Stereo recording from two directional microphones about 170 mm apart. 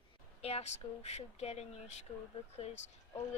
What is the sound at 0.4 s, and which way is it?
Speech, 40° left (ahead or behind).